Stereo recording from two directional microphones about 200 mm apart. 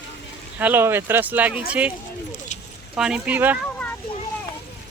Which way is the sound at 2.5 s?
35° left (ahead or behind).